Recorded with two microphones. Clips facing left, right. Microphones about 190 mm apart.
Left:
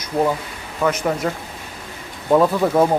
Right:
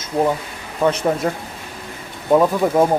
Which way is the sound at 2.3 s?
10° right (ahead or behind).